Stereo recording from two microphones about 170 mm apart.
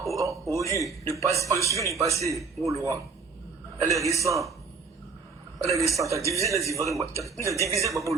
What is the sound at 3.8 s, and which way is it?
Speech, 20° right (ahead or behind).